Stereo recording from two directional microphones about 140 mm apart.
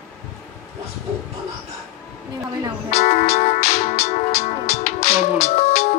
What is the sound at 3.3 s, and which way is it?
Music, 50° left (ahead or behind).